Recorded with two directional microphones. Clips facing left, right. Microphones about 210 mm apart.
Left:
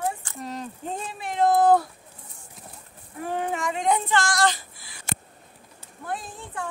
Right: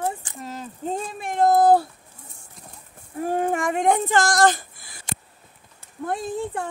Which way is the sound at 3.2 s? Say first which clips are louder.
Right 5 dB; 45° right (ahead or behind).